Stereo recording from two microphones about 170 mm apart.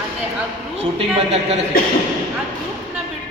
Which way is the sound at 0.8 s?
35° right (ahead or behind).